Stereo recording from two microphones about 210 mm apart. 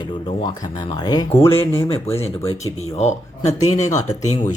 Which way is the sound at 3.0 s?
30° left (ahead or behind).